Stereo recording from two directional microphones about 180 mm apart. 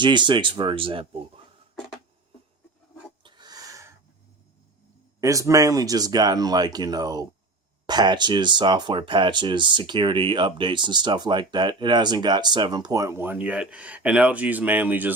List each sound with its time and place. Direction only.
0.0 s speech: 25° right (ahead or behind)
3.2 s a sound: 25° right (ahead or behind)
5.2 s speech: 20° right (ahead or behind)